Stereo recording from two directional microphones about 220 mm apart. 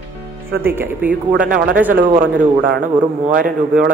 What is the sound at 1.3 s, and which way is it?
A man's voice, 40° right (ahead or behind).